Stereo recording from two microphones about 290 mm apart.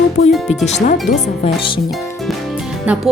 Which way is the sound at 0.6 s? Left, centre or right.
Left.